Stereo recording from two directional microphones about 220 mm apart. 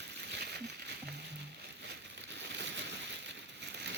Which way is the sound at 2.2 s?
55° right (ahead or behind).